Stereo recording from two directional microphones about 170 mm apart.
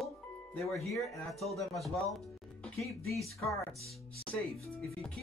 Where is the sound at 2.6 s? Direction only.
15° left (ahead or behind).